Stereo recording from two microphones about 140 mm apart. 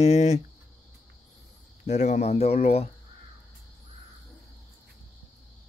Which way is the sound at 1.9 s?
55° left (ahead or behind).